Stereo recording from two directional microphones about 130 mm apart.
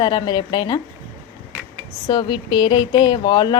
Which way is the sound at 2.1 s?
35° left (ahead or behind).